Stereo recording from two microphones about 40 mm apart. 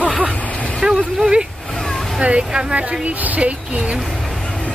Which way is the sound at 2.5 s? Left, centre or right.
Right.